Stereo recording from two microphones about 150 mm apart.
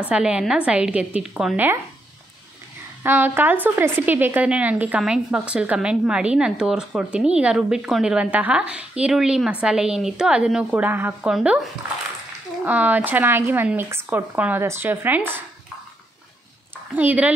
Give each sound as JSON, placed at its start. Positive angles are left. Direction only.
{"t": 0.1, "sound": "speech", "side_deg": -5}
{"t": 3.0, "sound": "speech", "side_deg": -15}
{"t": 12.6, "sound": "speech", "side_deg": -10}
{"t": 16.9, "sound": "speech", "side_deg": -10}